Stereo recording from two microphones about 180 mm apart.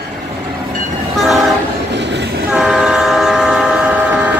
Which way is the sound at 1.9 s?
75° right (ahead or behind).